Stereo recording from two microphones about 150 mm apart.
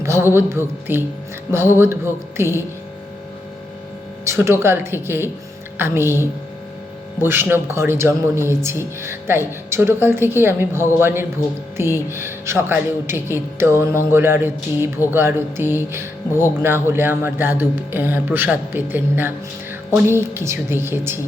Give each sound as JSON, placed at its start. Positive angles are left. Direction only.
{"t": 0.0, "sound": "music", "side_deg": -20}
{"t": 0.3, "sound": "speech", "side_deg": -15}
{"t": 4.3, "sound": "speech", "side_deg": -15}